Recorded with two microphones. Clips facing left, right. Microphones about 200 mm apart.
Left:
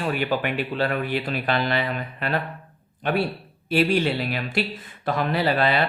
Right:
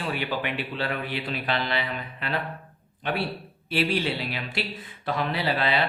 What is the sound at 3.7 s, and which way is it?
Speech, 45° left (ahead or behind).